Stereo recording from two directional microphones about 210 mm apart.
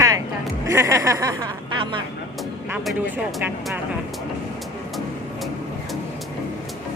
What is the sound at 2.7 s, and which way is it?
Speech, 5° right (ahead or behind).